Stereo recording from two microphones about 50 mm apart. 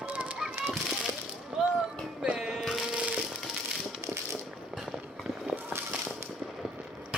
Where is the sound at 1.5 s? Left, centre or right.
Centre.